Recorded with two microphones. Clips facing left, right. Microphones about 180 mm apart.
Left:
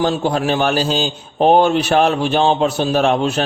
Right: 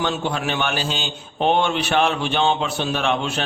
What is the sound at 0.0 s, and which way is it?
A man's voice, 35° left (ahead or behind).